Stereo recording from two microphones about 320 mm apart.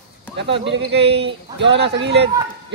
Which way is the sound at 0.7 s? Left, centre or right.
Right.